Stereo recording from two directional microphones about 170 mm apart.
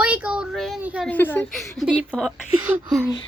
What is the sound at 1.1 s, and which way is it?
A child's voice, 10° left (ahead or behind).